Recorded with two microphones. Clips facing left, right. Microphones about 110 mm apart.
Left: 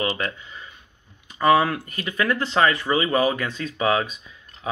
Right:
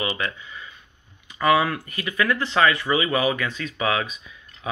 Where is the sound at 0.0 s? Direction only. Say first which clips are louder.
Left 2 dB; 40° left (ahead or behind).